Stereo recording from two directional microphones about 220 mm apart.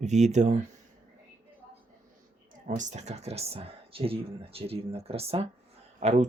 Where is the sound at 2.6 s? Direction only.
35° right (ahead or behind).